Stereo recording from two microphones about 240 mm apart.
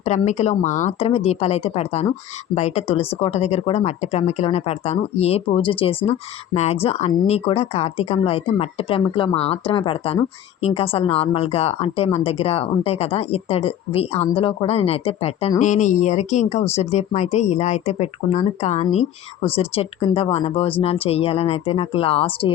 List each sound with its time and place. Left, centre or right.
0.0 s speech: left